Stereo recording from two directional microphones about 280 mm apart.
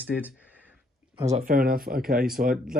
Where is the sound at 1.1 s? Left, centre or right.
Right.